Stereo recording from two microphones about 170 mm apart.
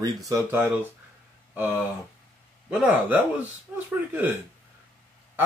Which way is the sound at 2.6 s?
5° right (ahead or behind).